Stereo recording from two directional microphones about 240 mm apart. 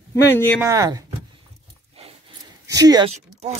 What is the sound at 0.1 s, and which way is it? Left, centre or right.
Speech, centre.